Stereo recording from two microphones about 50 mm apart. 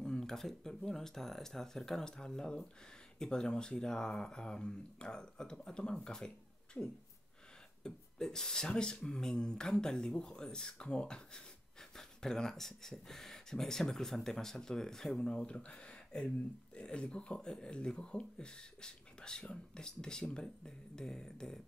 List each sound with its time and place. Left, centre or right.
0.0 s speech: centre